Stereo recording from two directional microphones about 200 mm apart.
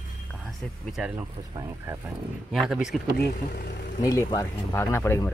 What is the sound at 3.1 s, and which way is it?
Speech, 50° left (ahead or behind).